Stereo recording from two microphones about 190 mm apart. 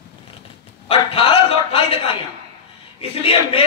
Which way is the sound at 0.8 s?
30° left (ahead or behind).